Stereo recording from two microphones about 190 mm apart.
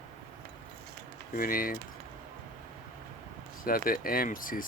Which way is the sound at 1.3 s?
50° left (ahead or behind).